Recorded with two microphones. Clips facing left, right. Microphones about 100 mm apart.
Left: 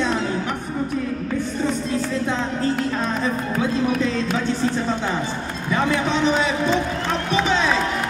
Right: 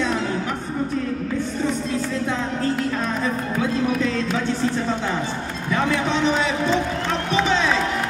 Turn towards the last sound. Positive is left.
turn(degrees=10)  # may be behind; listen again after turning